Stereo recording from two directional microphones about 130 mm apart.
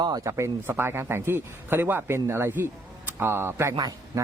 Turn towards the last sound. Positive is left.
turn(degrees=-20)  # may be behind; listen again after turning